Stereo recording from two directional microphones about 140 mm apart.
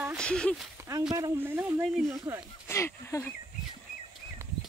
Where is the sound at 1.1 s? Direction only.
20° right (ahead or behind).